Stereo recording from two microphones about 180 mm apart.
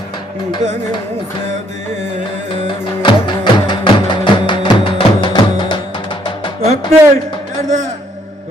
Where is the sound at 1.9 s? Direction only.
40° right (ahead or behind).